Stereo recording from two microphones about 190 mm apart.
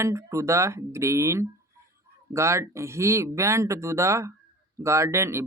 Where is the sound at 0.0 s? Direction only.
15° right (ahead or behind).